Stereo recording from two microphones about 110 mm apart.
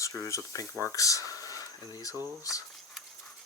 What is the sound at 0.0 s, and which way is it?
Speech, 30° left (ahead or behind).